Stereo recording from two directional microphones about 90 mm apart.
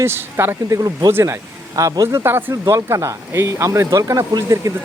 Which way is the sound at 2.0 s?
25° right (ahead or behind).